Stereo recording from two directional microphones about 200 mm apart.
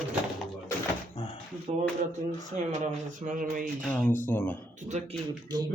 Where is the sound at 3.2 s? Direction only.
40° right (ahead or behind).